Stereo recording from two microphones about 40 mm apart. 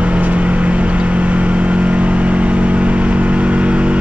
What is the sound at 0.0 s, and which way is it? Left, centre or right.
Vehicle, right.